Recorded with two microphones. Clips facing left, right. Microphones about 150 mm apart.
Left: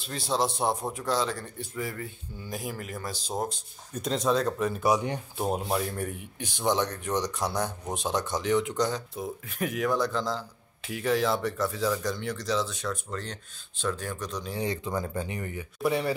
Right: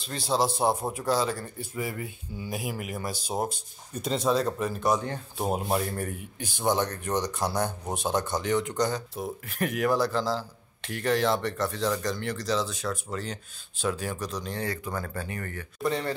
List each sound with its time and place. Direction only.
0.0 s speech: centre (ahead or behind)
4.9 s speech: 15° left (ahead or behind)
5.4 s speech: 5° right (ahead or behind)
14.6 s speech: 20° left (ahead or behind)